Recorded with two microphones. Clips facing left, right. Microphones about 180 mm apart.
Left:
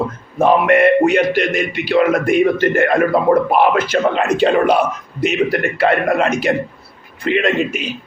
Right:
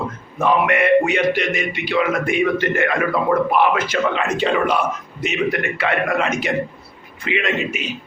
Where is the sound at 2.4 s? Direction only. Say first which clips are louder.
Left 5 dB; 40° left (ahead or behind).